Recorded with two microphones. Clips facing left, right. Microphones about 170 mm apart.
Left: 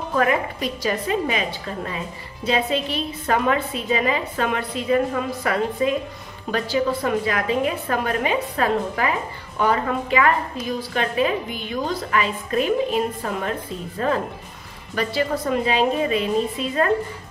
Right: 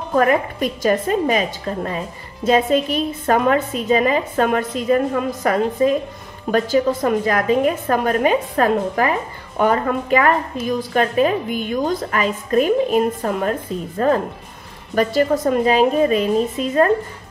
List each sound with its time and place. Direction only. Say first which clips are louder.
0.1 s a woman's voice: right 5 dB; 45° right (ahead or behind)